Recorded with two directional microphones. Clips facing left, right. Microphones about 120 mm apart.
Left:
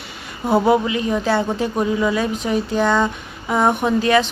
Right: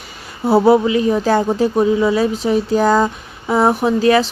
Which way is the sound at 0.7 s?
35° right (ahead or behind).